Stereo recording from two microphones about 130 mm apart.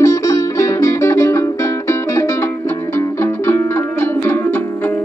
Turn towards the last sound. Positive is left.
turn(degrees=15)  # may be behind; listen again after turning